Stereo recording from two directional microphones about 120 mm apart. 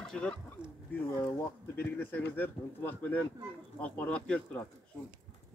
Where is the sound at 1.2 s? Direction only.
20° left (ahead or behind).